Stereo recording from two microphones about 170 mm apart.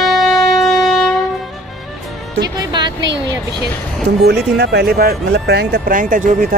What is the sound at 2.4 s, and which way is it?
Music, 25° right (ahead or behind).